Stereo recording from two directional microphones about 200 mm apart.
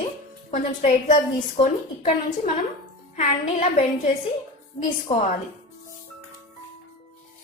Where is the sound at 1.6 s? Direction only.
25° left (ahead or behind).